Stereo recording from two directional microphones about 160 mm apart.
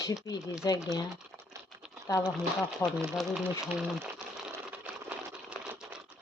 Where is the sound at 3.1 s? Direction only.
Centre (ahead or behind).